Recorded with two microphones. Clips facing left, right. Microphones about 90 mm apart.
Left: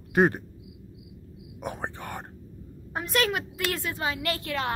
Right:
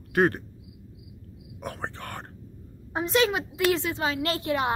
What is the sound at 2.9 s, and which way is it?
A woman's voice, 20° right (ahead or behind).